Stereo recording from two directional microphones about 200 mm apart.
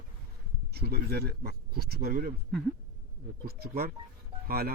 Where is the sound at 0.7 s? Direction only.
55° right (ahead or behind).